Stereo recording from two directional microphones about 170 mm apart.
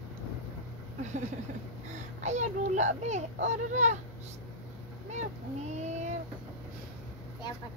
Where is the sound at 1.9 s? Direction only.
45° right (ahead or behind).